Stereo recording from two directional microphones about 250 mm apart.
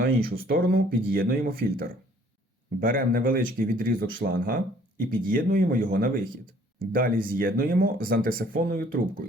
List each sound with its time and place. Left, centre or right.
0.0 s speech: right